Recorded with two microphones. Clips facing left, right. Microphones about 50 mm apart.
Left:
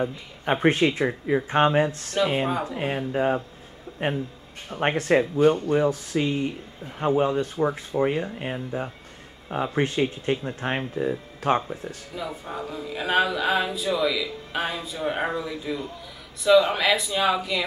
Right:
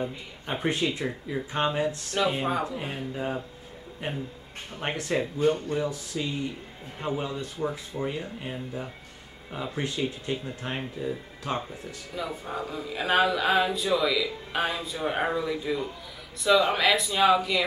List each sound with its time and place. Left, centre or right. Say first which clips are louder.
0.0 s speech: left 6 dB; left
2.2 s a sound: left 2 dB; centre
2.7 s speech: left 7 dB; left
4.0 s speech: left 7 dB; left
4.6 s speech: left 8 dB; left
12.2 s a sound: even; centre